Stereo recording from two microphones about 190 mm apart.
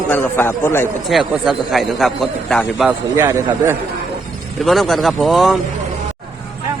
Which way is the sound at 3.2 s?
15° right (ahead or behind).